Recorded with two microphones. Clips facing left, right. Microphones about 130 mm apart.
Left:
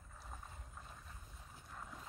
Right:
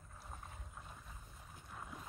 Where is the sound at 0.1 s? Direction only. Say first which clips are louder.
Right 1 dB; 5° right (ahead or behind).